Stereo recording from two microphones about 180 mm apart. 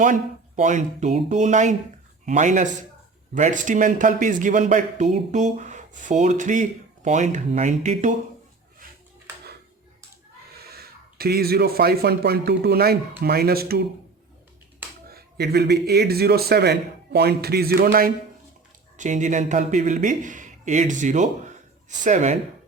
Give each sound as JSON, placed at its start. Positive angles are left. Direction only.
{"t": 0.0, "sound": "a man's voice", "side_deg": -45}
{"t": 10.7, "sound": "speech", "side_deg": -60}
{"t": 15.1, "sound": "speech", "side_deg": -65}
{"t": 18.9, "sound": "a man's voice", "side_deg": -45}